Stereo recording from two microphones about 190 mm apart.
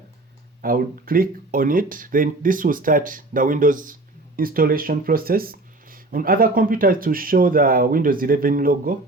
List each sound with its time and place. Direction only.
0.6 s speech: 50° right (ahead or behind)